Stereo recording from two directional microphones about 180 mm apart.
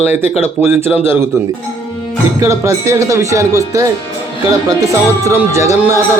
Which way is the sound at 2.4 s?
15° right (ahead or behind).